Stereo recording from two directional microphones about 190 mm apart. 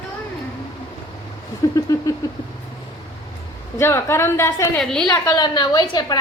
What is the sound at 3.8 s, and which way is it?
A woman's voice, 15° left (ahead or behind).